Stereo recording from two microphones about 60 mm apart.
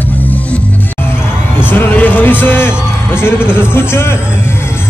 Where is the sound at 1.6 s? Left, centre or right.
Left.